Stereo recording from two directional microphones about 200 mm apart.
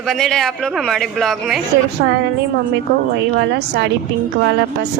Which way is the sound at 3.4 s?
55° right (ahead or behind).